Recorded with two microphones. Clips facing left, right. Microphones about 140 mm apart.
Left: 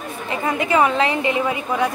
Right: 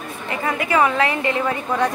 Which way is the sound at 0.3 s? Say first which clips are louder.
Left 1 dB; 20° left (ahead or behind).